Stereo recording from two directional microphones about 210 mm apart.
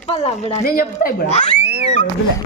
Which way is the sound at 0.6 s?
45° left (ahead or behind).